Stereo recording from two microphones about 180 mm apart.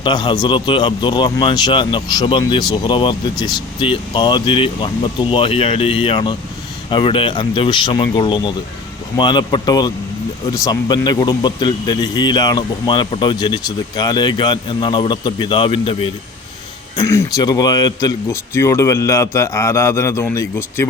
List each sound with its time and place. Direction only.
0.0 s speech: 25° left (ahead or behind)
17.1 s speech: 20° left (ahead or behind)